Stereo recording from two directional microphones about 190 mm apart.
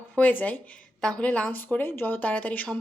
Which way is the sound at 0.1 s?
10° left (ahead or behind).